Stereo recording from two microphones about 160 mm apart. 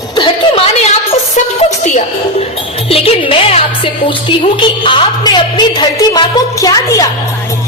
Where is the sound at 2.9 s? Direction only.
40° left (ahead or behind).